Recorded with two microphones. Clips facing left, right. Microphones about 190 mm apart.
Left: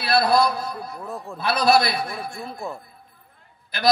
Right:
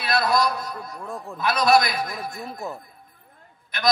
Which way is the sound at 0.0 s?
30° left (ahead or behind).